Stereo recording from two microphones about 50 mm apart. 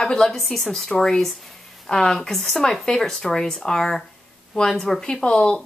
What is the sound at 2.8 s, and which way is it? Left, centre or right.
Speech, centre.